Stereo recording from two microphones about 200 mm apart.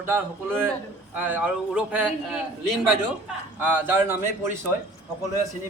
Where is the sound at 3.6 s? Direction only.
10° right (ahead or behind).